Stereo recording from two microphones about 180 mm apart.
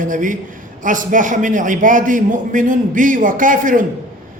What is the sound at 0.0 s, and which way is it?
A man's voice, 45° right (ahead or behind).